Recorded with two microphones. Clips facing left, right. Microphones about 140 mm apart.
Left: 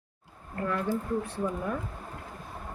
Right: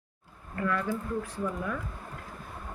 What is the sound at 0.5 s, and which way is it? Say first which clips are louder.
Speech: left 1 dB; 35° left (ahead or behind).